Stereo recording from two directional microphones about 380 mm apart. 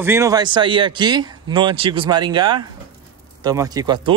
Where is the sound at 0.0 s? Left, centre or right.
Centre.